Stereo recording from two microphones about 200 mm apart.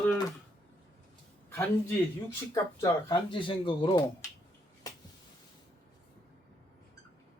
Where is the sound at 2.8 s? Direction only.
20° left (ahead or behind).